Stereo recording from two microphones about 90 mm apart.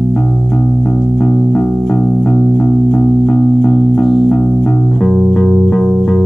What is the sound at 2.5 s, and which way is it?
Music, 15° left (ahead or behind).